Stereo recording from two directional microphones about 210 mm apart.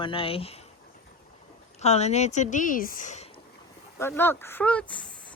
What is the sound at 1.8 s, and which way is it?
A woman's voice, 30° left (ahead or behind).